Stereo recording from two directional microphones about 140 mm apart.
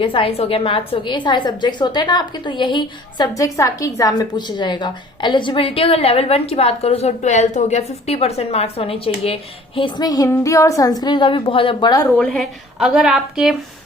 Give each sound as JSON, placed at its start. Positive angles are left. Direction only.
{"t": 0.0, "sound": "a woman's voice", "side_deg": 40}
{"t": 12.1, "sound": "a woman's voice", "side_deg": 5}